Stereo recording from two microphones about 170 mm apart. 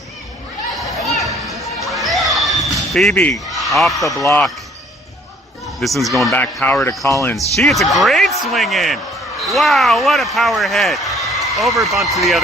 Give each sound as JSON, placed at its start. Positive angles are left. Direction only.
{"t": 0.8, "sound": "a sound", "side_deg": 0}
{"t": 2.7, "sound": "speech", "side_deg": 0}
{"t": 5.8, "sound": "speech", "side_deg": 0}
{"t": 7.6, "sound": "speech", "side_deg": 0}